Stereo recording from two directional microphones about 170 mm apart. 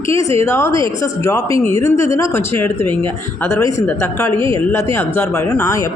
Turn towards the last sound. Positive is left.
turn(degrees=20)  # may be behind; listen again after turning